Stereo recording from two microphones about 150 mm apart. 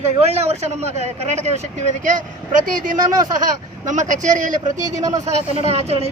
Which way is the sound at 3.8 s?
55° right (ahead or behind).